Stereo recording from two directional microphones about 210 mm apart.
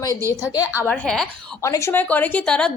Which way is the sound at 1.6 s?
15° left (ahead or behind).